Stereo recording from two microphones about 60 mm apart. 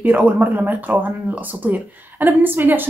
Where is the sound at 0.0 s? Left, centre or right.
Right.